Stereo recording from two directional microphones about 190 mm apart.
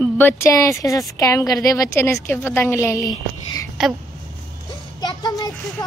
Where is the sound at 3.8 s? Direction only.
Centre (ahead or behind).